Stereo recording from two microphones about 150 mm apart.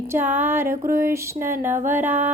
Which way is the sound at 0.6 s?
70° right (ahead or behind).